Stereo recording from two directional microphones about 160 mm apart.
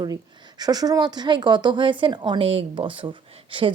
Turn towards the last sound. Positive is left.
turn(degrees=-30)  # may be behind; listen again after turning